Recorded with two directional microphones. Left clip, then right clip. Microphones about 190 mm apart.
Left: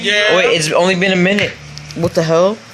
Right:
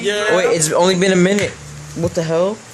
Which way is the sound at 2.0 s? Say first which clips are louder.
Left 5 dB; 20° left (ahead or behind).